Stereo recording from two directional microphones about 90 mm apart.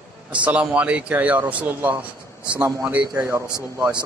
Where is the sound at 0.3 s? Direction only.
15° right (ahead or behind).